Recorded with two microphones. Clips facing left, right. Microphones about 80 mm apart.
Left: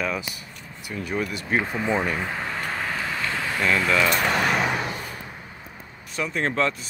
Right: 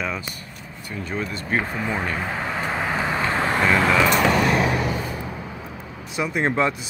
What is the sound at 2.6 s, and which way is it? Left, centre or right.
Vehicle, centre.